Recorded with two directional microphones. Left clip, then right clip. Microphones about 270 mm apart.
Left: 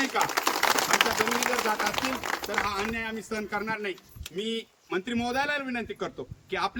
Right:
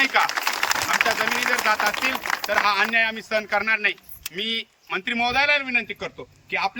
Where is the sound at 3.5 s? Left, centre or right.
Centre.